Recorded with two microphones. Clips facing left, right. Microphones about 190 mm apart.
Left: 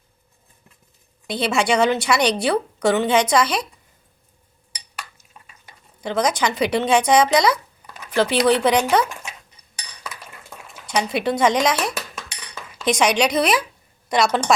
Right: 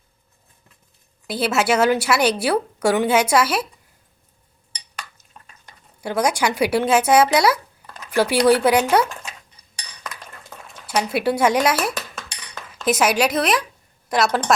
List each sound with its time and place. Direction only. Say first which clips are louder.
1.3 s a woman's voice: even; 5° right (ahead or behind)
6.0 s a woman's voice: even; 10° right (ahead or behind)
10.8 s a woman's voice: right 1 dB; 5° right (ahead or behind)